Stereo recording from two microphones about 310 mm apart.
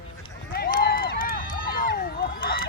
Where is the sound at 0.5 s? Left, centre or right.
Left.